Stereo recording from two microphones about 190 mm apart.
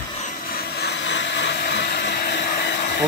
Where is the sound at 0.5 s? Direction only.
60° left (ahead or behind).